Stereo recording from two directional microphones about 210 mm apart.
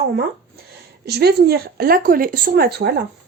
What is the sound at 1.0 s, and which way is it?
Speech, 50° right (ahead or behind).